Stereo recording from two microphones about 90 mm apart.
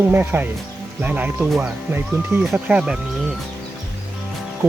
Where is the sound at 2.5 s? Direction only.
15° right (ahead or behind).